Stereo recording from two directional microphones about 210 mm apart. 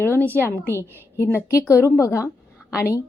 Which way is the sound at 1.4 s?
10° left (ahead or behind).